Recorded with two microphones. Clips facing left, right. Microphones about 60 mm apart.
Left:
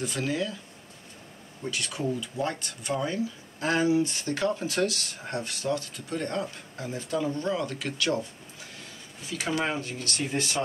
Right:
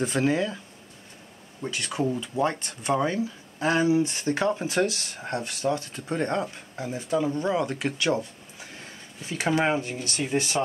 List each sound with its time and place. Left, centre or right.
0.0 s speech: right
1.6 s speech: right
6.8 s speech: centre
9.2 s speech: right